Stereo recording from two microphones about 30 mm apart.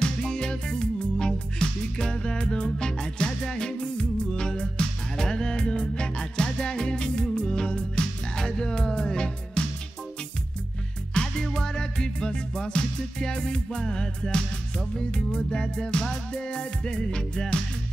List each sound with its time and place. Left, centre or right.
0.0 s music: left
11.1 s music: left